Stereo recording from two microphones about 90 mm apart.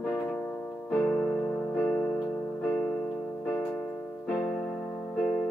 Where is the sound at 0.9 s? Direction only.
15° left (ahead or behind).